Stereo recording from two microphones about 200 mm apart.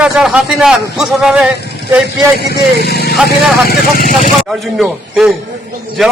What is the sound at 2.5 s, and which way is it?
Speech, 55° left (ahead or behind).